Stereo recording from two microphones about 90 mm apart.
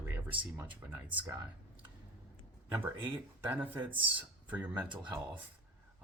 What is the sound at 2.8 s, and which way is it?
Speech, 20° right (ahead or behind).